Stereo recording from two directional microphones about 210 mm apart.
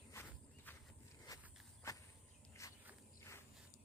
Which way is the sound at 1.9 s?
15° left (ahead or behind).